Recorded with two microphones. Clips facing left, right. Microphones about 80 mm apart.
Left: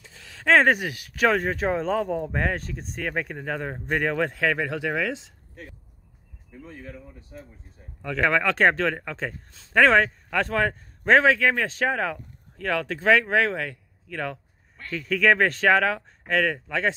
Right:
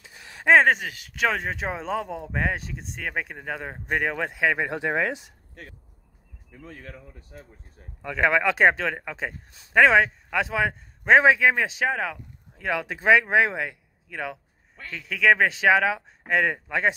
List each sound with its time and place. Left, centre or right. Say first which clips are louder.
0.0 s a sound: right 2 dB; right
0.6 s speech: even; centre; by 5.3 s right
6.6 s speech: left 1 dB; right
8.0 s speech: right 1 dB; centre
9.8 s speech: even; centre
12.5 s speech: left 1 dB; centre